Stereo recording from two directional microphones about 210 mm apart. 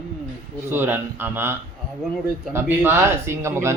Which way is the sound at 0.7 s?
10° right (ahead or behind).